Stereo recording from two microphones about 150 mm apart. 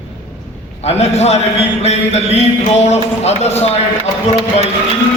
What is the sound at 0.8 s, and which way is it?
A man's voice, 45° left (ahead or behind).